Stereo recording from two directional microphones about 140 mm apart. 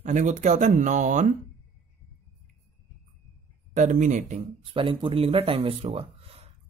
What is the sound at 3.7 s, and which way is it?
Speech, 65° right (ahead or behind).